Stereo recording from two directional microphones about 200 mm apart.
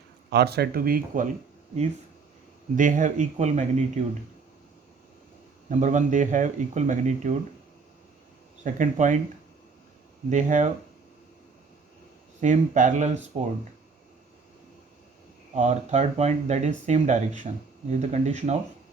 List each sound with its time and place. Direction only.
0.3 s speech: 55° right (ahead or behind)
2.7 s speech: 40° right (ahead or behind)
5.6 s speech: 40° right (ahead or behind)
8.6 s speech: 40° right (ahead or behind)
10.2 s speech: 35° right (ahead or behind)
12.4 s speech: 40° right (ahead or behind)
15.5 s speech: 35° right (ahead or behind)